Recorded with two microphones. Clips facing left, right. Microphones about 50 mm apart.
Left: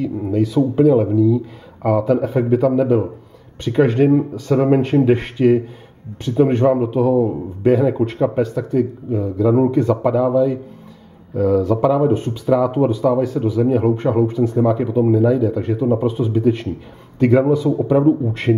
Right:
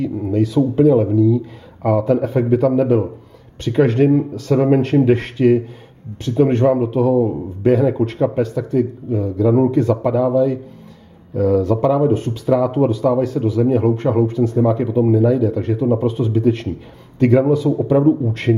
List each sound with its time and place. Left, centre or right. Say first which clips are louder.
0.0 s speech: even; centre
3.7 s a man's voice: even; centre